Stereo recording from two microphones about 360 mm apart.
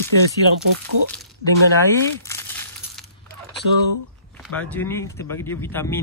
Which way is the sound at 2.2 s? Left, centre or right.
Centre.